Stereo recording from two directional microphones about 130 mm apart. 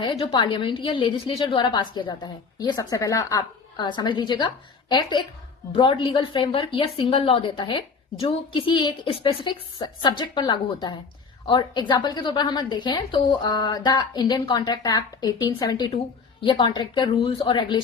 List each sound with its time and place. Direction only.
0.0 s a woman's voice: 35° left (ahead or behind)
3.8 s a woman's voice: 35° left (ahead or behind)